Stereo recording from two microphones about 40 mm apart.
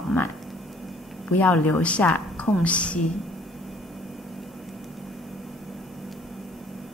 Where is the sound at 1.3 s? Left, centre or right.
Left.